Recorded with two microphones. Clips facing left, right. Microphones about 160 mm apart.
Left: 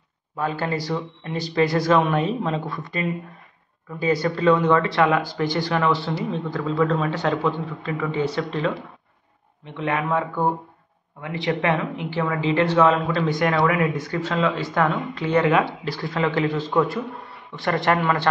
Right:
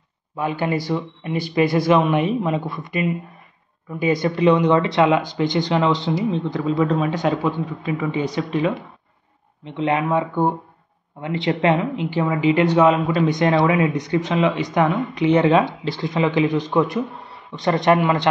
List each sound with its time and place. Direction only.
0.4 s speech: 15° right (ahead or behind)
9.8 s speech: 20° right (ahead or behind)